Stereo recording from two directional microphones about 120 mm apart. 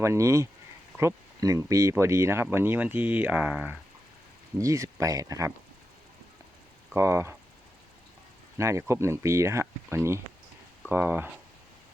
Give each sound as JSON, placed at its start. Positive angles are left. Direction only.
{"t": 0.0, "sound": "speech", "side_deg": -25}
{"t": 4.5, "sound": "speech", "side_deg": -25}
{"t": 6.9, "sound": "speech", "side_deg": -20}
{"t": 8.5, "sound": "speech", "side_deg": -25}